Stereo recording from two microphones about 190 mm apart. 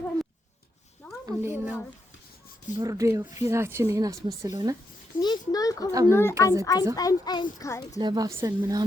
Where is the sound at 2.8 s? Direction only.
15° right (ahead or behind).